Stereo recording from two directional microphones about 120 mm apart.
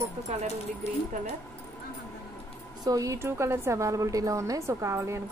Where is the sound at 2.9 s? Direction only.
30° right (ahead or behind).